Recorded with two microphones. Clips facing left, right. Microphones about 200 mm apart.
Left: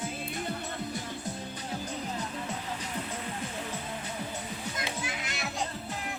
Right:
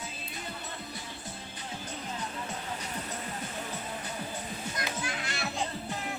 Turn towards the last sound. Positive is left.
turn(degrees=20)  # may be behind; listen again after turning